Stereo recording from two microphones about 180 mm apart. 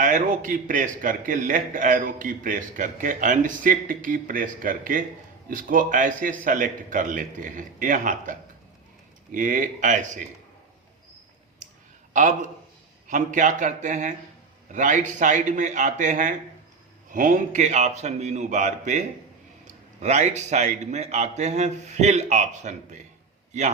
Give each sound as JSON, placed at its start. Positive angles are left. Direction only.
{"t": 0.0, "sound": "a man's voice", "side_deg": -45}
{"t": 12.1, "sound": "a man's voice", "side_deg": -45}